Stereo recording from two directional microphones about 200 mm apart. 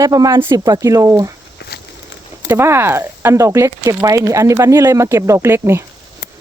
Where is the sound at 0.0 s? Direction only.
15° right (ahead or behind).